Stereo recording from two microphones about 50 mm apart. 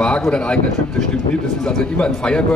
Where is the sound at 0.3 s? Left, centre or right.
Centre.